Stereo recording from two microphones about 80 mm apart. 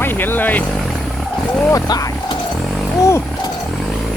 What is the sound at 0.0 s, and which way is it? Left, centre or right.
Speech, left.